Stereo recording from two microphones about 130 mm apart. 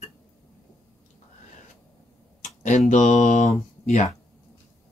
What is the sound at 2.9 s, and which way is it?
Speech, 70° left (ahead or behind).